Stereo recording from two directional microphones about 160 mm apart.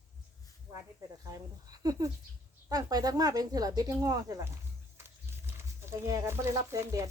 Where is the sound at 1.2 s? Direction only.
20° right (ahead or behind).